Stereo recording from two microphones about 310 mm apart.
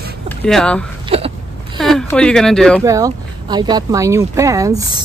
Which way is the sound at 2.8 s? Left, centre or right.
Centre.